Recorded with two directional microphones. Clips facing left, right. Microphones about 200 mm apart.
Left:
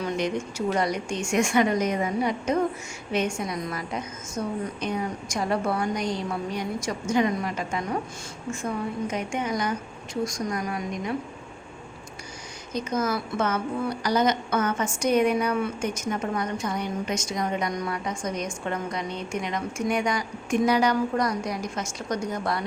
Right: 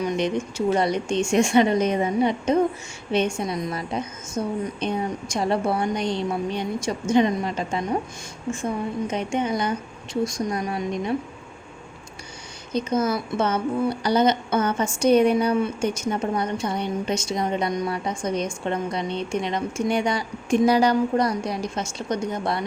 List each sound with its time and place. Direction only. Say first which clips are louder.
0.0 s a woman's voice: right 3 dB; 20° right (ahead or behind)
12.7 s a woman's voice: right 4 dB; 30° right (ahead or behind)